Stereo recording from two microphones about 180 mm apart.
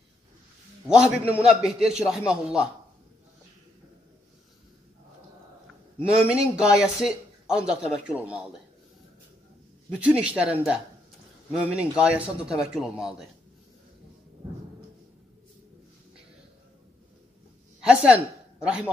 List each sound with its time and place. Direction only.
0.8 s a man's voice: 5° right (ahead or behind)
6.0 s a man's voice: 5° right (ahead or behind)
9.9 s a man's voice: 5° right (ahead or behind)
17.8 s a woman's voice: 5° right (ahead or behind)